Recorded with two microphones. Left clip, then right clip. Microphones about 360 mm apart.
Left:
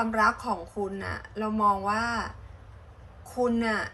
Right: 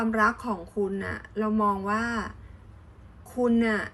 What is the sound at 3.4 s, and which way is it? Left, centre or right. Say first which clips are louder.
Speech: right 3 dB; centre.